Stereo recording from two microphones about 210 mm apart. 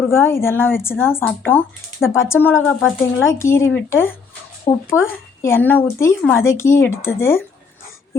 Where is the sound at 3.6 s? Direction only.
65° left (ahead or behind).